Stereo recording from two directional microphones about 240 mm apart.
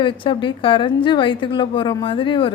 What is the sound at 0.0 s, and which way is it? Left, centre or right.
A woman's voice, centre.